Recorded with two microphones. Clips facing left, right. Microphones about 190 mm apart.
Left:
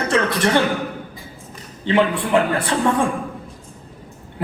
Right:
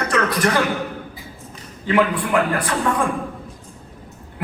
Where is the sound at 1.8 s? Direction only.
30° left (ahead or behind).